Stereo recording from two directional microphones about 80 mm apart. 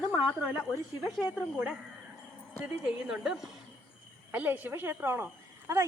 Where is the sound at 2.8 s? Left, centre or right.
Centre.